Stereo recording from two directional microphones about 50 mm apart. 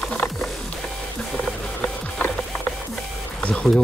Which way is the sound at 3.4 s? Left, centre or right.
Left.